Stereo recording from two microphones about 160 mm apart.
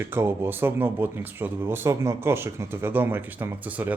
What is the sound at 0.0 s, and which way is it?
Speech, 15° right (ahead or behind).